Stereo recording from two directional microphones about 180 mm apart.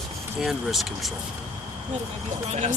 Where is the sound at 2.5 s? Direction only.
40° right (ahead or behind).